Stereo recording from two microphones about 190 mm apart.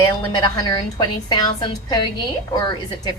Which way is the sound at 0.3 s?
20° left (ahead or behind).